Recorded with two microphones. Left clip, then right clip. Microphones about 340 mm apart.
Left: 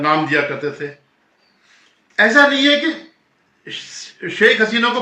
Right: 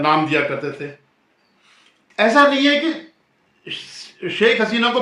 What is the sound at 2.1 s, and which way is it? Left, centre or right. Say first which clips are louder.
Speech: left 2 dB; centre.